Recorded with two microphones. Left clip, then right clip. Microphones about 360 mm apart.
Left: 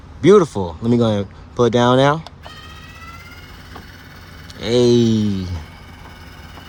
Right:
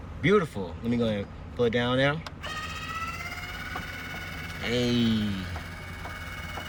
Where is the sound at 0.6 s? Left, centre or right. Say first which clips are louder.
Left 12 dB; left.